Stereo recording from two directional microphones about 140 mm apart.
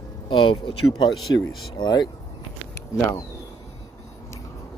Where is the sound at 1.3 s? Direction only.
25° left (ahead or behind).